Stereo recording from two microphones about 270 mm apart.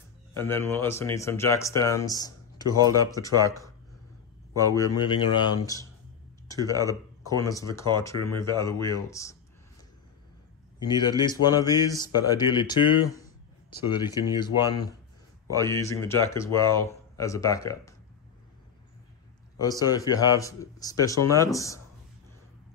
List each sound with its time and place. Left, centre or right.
0.4 s a man's voice: centre
4.7 s a man's voice: centre
6.4 s a sound: centre
6.7 s speech: centre
7.2 s a man's voice: centre
10.8 s a man's voice: centre
19.6 s a man's voice: centre